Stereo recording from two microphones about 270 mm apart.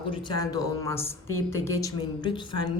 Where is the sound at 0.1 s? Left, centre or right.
Centre.